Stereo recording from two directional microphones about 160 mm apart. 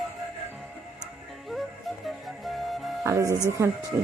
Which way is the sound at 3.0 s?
20° right (ahead or behind).